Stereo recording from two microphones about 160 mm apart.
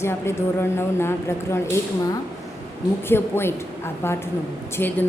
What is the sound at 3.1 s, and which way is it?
Speech, 15° left (ahead or behind).